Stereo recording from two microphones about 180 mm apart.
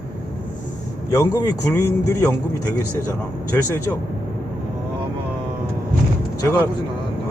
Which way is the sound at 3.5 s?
15° left (ahead or behind).